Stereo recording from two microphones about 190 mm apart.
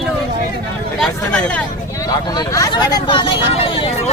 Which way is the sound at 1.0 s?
5° left (ahead or behind).